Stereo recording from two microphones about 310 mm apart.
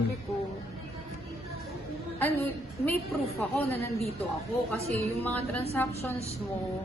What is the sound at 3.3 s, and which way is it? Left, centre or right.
Speech, centre.